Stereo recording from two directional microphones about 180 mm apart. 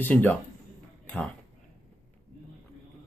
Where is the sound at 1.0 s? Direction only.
10° left (ahead or behind).